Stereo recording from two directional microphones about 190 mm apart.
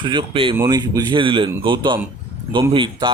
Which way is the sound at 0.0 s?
25° right (ahead or behind).